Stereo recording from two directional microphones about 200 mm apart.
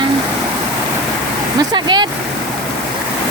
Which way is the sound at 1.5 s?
20° right (ahead or behind).